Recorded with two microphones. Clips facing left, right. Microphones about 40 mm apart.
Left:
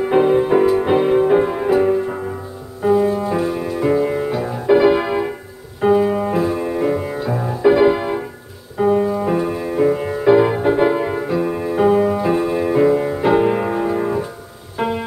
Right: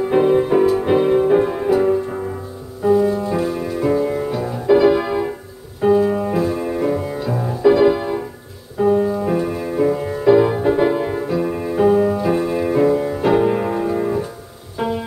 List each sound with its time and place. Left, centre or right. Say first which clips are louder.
0.0 s music: left 1 dB; left
3.3 s music: left 1 dB; centre; by 6.3 s left
6.3 s music: left 1 dB; left
8.9 s music: left 1 dB; left
9.2 s music: left 1 dB; centre
9.9 s music: right 1 dB; left; by 11.7 s centre
11.7 s music: even; left
12.2 s music: left 1 dB; centre
12.7 s music: left 1 dB; left